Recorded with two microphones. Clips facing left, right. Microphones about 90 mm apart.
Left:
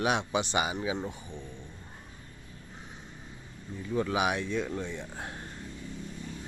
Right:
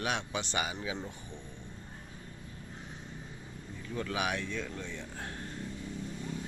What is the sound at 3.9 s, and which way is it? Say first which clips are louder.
Speech: left 6 dB; 20° left (ahead or behind).